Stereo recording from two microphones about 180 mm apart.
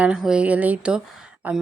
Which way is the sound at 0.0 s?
5° right (ahead or behind).